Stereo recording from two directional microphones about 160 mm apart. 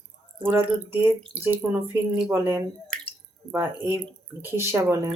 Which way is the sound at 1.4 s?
15° right (ahead or behind).